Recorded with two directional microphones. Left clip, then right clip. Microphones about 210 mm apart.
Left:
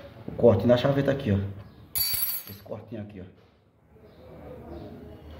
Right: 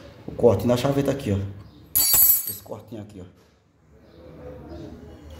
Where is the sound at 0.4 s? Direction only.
5° right (ahead or behind).